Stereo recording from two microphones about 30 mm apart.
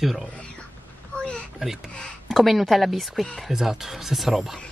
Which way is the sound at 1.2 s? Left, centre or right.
Left.